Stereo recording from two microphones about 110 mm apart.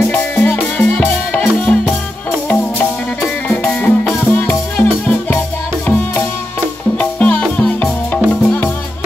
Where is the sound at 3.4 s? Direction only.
10° left (ahead or behind).